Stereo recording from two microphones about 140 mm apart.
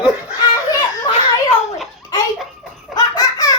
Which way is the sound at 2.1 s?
25° left (ahead or behind).